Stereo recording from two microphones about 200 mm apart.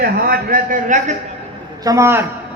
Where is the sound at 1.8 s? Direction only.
15° right (ahead or behind).